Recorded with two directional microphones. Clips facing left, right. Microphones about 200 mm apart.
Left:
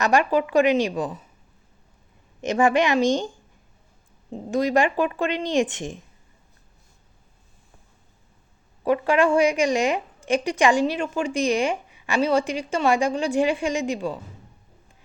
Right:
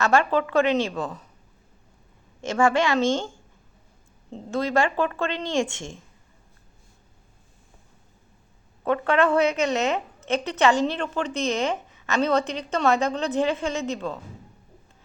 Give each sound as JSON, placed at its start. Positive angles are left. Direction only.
{"t": 0.0, "sound": "a woman's voice", "side_deg": 15}
{"t": 2.4, "sound": "a woman's voice", "side_deg": 20}
{"t": 4.5, "sound": "a woman's voice", "side_deg": 15}
{"t": 8.8, "sound": "a woman's voice", "side_deg": 10}